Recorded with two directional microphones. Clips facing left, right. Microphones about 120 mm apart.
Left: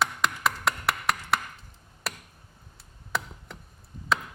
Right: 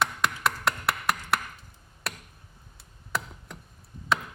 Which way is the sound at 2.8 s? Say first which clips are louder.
Left 1 dB; centre (ahead or behind).